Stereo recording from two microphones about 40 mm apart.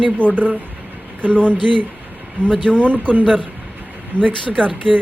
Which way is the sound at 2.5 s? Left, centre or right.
Centre.